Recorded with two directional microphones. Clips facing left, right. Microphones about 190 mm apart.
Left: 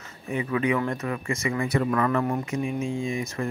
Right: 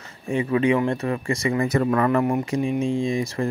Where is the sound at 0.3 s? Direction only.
25° right (ahead or behind); by 2.0 s 40° right (ahead or behind).